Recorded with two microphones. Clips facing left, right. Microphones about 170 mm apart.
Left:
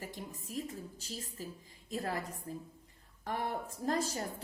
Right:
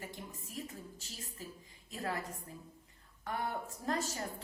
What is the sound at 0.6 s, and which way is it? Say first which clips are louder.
A woman's voice: left 4 dB; 35° left (ahead or behind).